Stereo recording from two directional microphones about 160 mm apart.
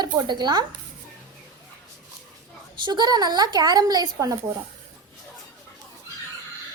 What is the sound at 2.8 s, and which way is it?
A woman's voice, 25° right (ahead or behind).